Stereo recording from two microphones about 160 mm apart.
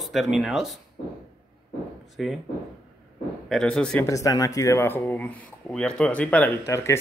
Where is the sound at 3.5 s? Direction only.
5° left (ahead or behind).